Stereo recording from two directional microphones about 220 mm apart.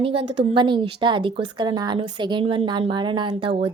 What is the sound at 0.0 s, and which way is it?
A woman's voice, 25° right (ahead or behind).